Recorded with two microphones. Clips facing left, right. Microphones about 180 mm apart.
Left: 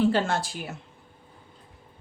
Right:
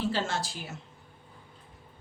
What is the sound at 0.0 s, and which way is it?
Speech, 55° left (ahead or behind).